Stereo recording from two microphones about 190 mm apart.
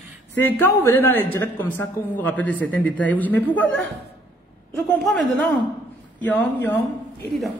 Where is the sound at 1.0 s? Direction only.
10° left (ahead or behind).